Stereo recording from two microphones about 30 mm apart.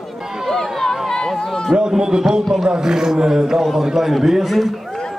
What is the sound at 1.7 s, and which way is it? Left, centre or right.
Speech, right.